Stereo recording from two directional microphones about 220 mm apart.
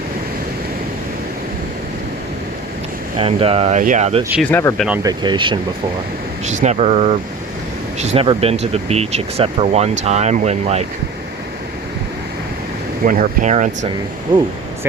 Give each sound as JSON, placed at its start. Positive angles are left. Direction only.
{"t": 3.2, "sound": "speech", "side_deg": -25}
{"t": 4.2, "sound": "speech", "side_deg": -5}
{"t": 4.4, "sound": "speech", "side_deg": 10}
{"t": 5.0, "sound": "speech", "side_deg": -20}
{"t": 6.4, "sound": "speech", "side_deg": -30}
{"t": 13.1, "sound": "speech", "side_deg": -35}